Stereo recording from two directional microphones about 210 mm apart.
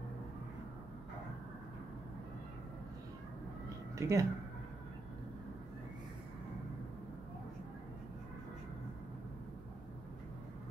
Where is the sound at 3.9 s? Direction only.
15° right (ahead or behind).